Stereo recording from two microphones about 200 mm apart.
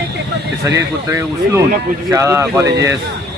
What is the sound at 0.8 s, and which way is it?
Speech, 15° right (ahead or behind).